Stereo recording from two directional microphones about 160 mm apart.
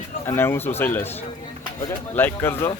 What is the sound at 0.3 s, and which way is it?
Speech, 15° left (ahead or behind).